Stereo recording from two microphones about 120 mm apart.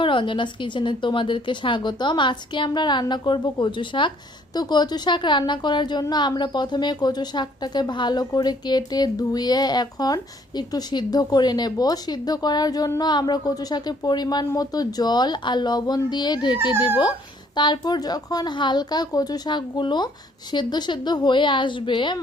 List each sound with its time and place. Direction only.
0.0 s a woman's voice: 45° left (ahead or behind)